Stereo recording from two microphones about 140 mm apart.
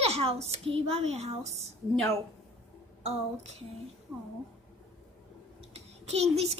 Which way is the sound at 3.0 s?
50° right (ahead or behind).